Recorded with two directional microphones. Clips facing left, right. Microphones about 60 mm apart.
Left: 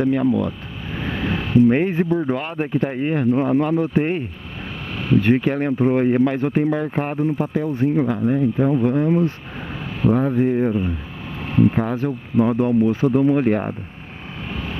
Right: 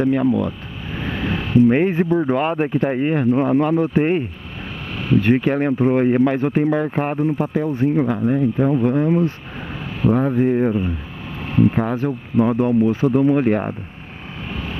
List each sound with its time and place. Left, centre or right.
0.0 s speech: right
7.2 s speech: right